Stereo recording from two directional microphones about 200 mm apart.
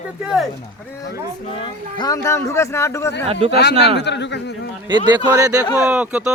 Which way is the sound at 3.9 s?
60° left (ahead or behind).